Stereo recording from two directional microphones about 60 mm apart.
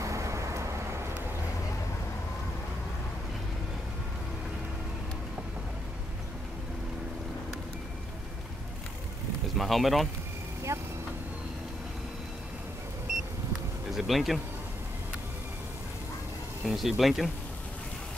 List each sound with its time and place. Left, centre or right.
0.0 s vehicle: right
9.6 s speech: centre
10.7 s vehicle: right
13.9 s speech: centre
16.6 s speech: centre